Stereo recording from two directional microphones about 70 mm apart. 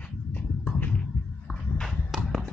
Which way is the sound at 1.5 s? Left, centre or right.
Centre.